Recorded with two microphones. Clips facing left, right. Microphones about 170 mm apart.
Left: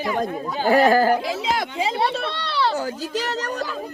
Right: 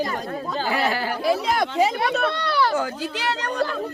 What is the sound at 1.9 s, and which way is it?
Speech, 30° left (ahead or behind).